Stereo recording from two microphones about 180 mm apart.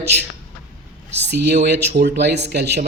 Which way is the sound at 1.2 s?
65° right (ahead or behind).